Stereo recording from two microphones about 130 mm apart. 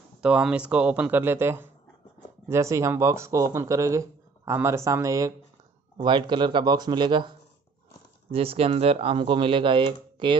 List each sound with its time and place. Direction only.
0.2 s speech: 10° right (ahead or behind); by 5.3 s 25° right (ahead or behind)
5.9 s speech: 40° right (ahead or behind)